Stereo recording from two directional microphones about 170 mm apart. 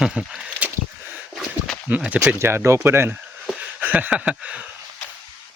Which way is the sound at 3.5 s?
10° right (ahead or behind).